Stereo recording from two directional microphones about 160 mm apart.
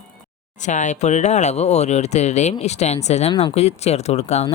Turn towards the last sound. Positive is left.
turn(degrees=40)  # may be behind; listen again after turning